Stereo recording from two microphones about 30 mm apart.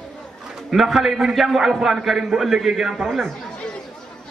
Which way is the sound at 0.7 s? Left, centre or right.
Centre.